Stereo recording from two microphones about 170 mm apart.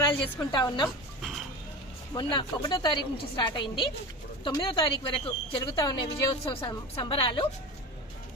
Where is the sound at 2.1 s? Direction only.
25° left (ahead or behind).